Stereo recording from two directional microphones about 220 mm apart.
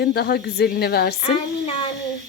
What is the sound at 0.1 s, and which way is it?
Speech, 45° left (ahead or behind).